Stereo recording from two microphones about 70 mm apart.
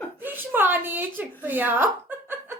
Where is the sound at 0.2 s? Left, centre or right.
Right.